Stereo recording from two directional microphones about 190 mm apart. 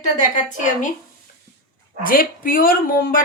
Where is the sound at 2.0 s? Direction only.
50° left (ahead or behind).